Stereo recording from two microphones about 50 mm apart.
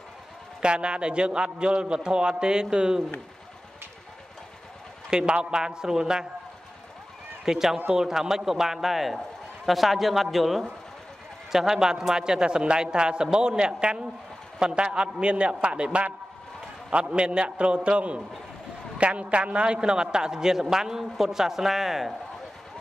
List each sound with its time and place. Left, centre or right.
0.6 s a man's voice: centre
5.1 s a man's voice: centre
7.4 s a man's voice: centre